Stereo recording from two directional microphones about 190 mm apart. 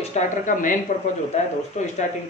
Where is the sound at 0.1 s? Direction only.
40° left (ahead or behind).